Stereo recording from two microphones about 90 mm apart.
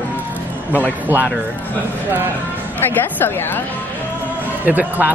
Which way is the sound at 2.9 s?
20° left (ahead or behind).